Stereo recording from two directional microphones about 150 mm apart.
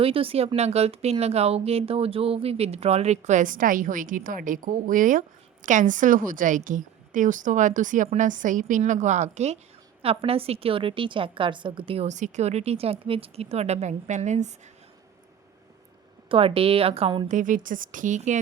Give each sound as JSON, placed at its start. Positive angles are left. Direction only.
{"t": 0.0, "sound": "a woman's voice", "side_deg": -40}
{"t": 12.0, "sound": "speech", "side_deg": -55}
{"t": 16.3, "sound": "a woman's voice", "side_deg": -40}
{"t": 17.2, "sound": "a woman's voice", "side_deg": -60}